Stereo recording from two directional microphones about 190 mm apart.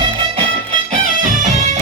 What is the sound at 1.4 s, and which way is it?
Music, 40° right (ahead or behind).